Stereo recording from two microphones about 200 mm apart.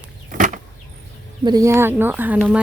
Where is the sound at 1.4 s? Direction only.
20° right (ahead or behind).